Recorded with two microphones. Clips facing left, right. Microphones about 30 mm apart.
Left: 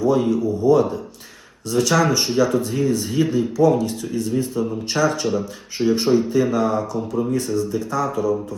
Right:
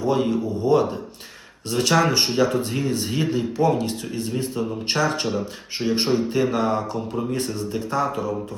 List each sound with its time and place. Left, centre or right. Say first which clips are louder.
0.0 s speech: left 3 dB; right